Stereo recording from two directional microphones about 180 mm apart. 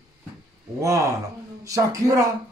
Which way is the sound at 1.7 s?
20° right (ahead or behind).